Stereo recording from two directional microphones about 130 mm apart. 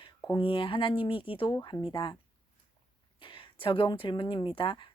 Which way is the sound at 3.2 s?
45° left (ahead or behind).